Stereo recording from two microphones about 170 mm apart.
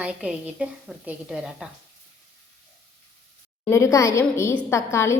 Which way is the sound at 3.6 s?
15° left (ahead or behind).